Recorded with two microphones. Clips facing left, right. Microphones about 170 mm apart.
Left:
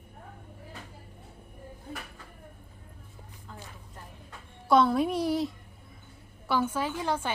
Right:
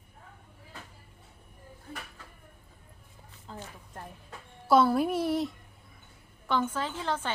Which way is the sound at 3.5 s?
30° right (ahead or behind).